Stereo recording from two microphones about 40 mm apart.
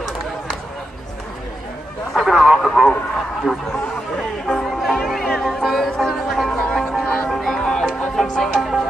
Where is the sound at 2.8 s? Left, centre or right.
Centre.